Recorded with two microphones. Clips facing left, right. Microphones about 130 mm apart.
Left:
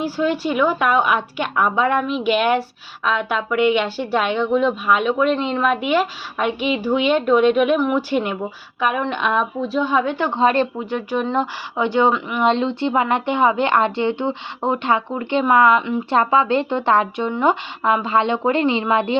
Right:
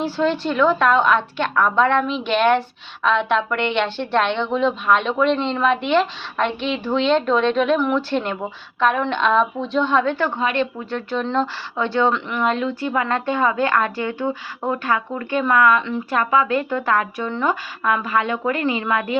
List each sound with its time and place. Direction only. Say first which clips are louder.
0.0 s a woman's voice: even; 10° left (ahead or behind)
10.4 s speech: left 6 dB; 35° left (ahead or behind)
10.8 s a woman's voice: left 2 dB; 15° left (ahead or behind)